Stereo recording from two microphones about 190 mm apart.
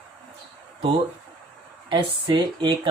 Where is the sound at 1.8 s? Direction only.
25° right (ahead or behind).